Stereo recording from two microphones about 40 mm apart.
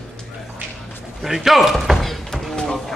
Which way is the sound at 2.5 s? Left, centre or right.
Centre.